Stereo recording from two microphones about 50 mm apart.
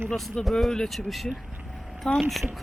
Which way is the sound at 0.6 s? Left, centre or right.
Centre.